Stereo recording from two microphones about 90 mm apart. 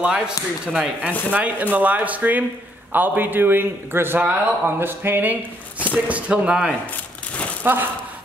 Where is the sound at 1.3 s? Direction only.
15° right (ahead or behind).